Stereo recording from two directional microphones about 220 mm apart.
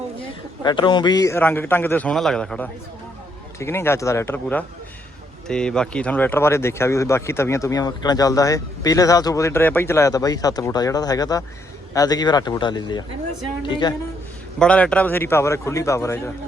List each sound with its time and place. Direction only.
0.2 s speech: 20° left (ahead or behind)
14.6 s speech: 5° left (ahead or behind)